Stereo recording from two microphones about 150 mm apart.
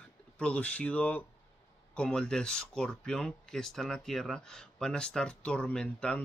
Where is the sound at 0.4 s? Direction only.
10° left (ahead or behind).